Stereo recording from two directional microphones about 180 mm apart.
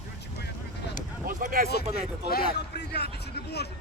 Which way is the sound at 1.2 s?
50° right (ahead or behind).